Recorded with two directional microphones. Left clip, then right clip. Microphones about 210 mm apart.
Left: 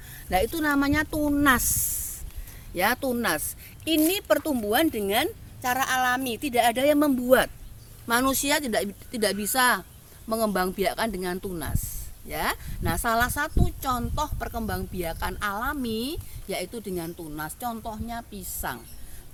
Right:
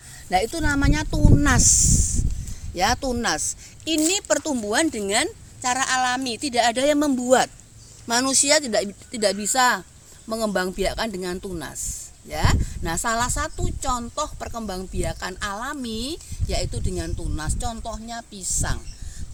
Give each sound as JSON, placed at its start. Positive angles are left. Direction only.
{"t": 0.3, "sound": "a woman's voice", "side_deg": -20}
{"t": 2.7, "sound": "a woman's voice", "side_deg": -20}